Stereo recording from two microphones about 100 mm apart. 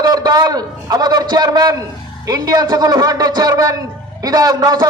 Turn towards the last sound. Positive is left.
turn(degrees=-40)  # may be behind; listen again after turning